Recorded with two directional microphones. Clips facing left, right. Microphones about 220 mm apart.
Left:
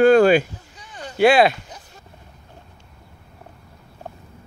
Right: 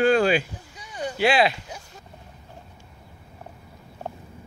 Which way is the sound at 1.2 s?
50° left (ahead or behind).